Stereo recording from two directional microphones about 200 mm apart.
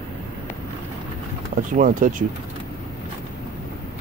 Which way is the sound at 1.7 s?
40° right (ahead or behind).